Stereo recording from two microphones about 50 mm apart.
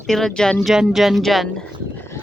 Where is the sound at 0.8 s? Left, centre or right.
Centre.